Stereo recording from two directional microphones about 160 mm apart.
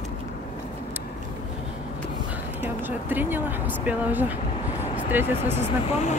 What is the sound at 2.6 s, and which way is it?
Speech, 10° right (ahead or behind).